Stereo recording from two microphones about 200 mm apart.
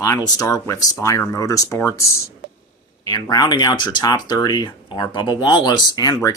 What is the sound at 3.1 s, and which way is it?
Speech, 20° left (ahead or behind).